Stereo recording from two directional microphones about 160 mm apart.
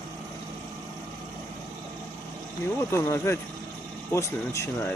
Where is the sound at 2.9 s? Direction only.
15° left (ahead or behind).